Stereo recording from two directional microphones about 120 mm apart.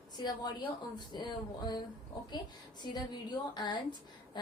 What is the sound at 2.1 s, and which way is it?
A woman's voice, 35° left (ahead or behind).